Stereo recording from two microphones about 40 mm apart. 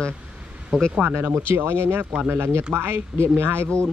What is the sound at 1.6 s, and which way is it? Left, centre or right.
Speech, right.